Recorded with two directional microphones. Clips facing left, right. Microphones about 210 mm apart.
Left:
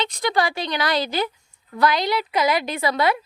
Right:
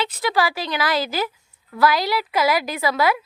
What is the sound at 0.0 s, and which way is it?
A woman's voice, 5° right (ahead or behind).